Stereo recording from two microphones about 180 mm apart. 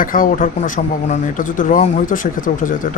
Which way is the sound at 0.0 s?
50° left (ahead or behind).